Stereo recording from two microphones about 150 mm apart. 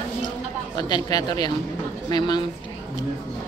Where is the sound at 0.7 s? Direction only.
30° left (ahead or behind).